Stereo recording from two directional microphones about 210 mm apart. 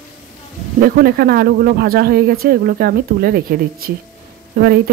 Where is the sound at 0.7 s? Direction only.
45° right (ahead or behind).